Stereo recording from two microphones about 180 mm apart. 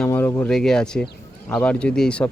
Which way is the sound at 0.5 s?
5° left (ahead or behind).